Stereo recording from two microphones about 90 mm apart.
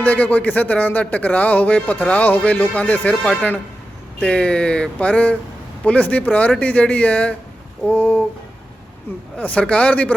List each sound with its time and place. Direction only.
0.0 s speech: 20° left (ahead or behind)
9.4 s speech: 15° left (ahead or behind)